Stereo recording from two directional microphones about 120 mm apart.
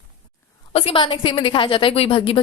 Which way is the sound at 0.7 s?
50° left (ahead or behind).